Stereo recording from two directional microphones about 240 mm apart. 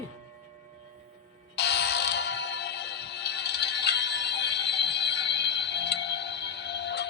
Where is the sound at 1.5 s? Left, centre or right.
Left.